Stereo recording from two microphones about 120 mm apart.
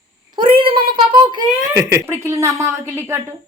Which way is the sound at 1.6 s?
25° right (ahead or behind).